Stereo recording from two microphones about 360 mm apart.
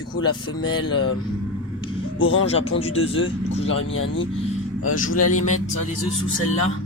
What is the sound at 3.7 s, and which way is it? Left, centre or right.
A man's voice, left.